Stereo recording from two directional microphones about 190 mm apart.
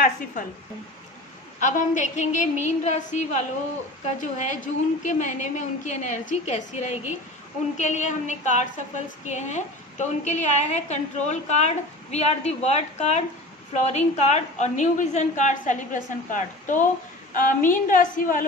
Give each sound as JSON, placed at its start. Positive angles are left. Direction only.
{"t": 1.6, "sound": "a woman's voice", "side_deg": 40}